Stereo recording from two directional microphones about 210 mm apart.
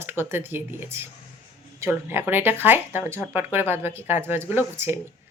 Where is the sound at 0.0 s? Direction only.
10° right (ahead or behind).